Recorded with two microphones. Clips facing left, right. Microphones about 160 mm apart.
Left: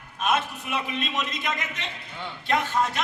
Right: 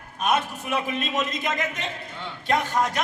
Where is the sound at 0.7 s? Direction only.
45° right (ahead or behind).